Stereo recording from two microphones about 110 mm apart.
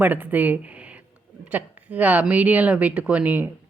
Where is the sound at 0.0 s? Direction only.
15° right (ahead or behind).